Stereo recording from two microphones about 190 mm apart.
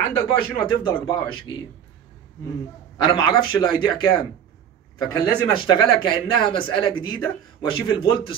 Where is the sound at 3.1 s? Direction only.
25° left (ahead or behind).